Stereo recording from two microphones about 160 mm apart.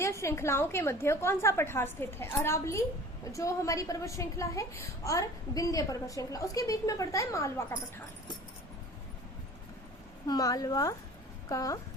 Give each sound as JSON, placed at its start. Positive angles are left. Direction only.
{"t": 0.0, "sound": "a woman's voice", "side_deg": 15}
{"t": 10.2, "sound": "a woman's voice", "side_deg": 25}